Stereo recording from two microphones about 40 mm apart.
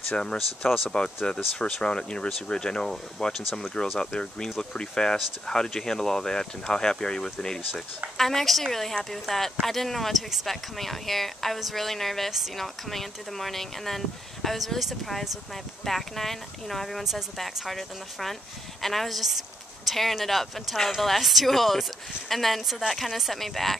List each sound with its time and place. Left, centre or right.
0.2 s speech: left
3.2 s speech: centre